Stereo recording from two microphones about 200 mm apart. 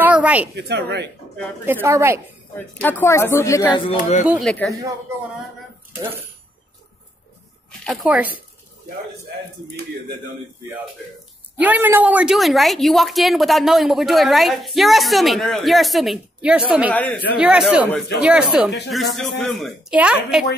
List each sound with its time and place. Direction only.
0.0 s a sound: 5° right (ahead or behind)
0.6 s speech: 55° right (ahead or behind)
1.7 s a woman's voice: 10° right (ahead or behind)
2.8 s a woman's voice: 10° left (ahead or behind)
4.2 s speech: 5° right (ahead or behind)
7.8 s speech: centre (ahead or behind)
11.6 s speech: 10° right (ahead or behind)
16.9 s a woman's voice: 5° left (ahead or behind)
17.4 s speech: 5° right (ahead or behind)